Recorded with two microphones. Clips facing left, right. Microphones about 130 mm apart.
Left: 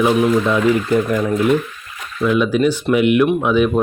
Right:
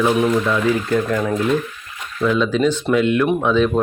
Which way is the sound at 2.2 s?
10° left (ahead or behind).